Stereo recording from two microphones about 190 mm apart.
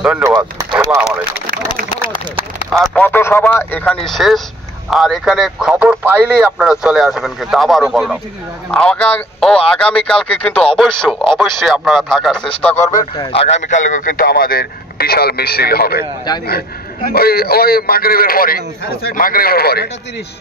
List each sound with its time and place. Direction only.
0.0 s speech: 5° right (ahead or behind)
2.8 s speech: 5° left (ahead or behind)
13.2 s speech: 30° left (ahead or behind); by 19.9 s 55° left (ahead or behind)